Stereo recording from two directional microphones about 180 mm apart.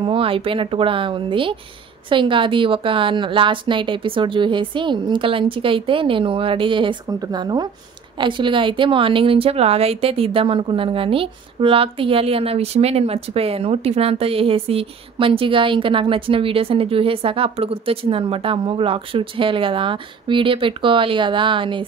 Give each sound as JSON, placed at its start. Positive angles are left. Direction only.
{"t": 0.0, "sound": "a woman's voice", "side_deg": -30}